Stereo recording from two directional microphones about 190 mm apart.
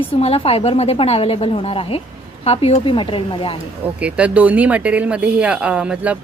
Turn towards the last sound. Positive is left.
turn(degrees=-5)  # may be behind; listen again after turning